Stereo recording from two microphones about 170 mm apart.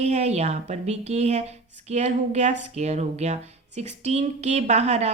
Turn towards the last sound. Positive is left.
turn(degrees=-40)  # may be behind; listen again after turning